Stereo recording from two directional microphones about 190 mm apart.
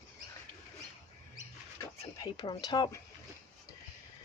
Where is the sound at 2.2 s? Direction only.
25° left (ahead or behind).